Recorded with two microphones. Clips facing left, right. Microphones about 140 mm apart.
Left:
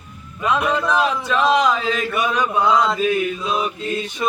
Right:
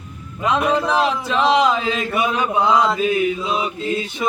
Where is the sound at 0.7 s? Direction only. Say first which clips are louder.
Right 1 dB; 30° right (ahead or behind).